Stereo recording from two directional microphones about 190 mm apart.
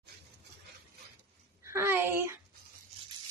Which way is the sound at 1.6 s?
15° right (ahead or behind).